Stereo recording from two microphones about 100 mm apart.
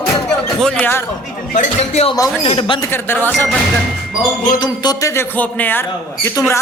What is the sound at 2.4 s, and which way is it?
Speech, 65° left (ahead or behind).